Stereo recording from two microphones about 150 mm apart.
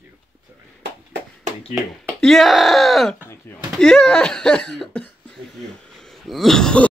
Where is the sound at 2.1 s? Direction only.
Centre (ahead or behind).